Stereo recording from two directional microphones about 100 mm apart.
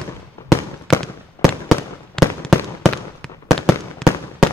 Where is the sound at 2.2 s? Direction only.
5° left (ahead or behind).